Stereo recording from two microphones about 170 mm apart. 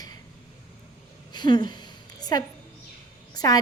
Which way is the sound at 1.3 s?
25° left (ahead or behind).